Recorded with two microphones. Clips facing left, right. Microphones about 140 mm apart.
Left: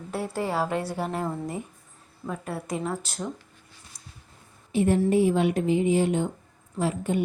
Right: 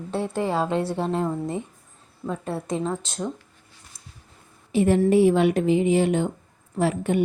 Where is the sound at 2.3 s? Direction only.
25° right (ahead or behind).